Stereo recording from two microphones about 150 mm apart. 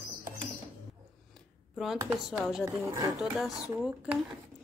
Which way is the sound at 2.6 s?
15° right (ahead or behind).